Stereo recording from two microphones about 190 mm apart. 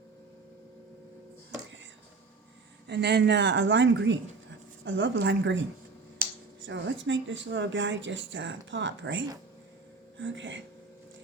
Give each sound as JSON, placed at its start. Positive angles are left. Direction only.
{"t": 2.8, "sound": "speech", "side_deg": -65}
{"t": 6.2, "sound": "a sound", "side_deg": -50}
{"t": 6.6, "sound": "speech", "side_deg": -75}